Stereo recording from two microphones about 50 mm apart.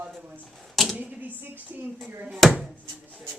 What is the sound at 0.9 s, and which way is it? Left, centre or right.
Speech, right.